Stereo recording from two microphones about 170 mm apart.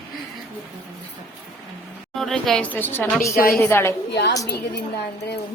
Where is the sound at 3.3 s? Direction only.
60° left (ahead or behind).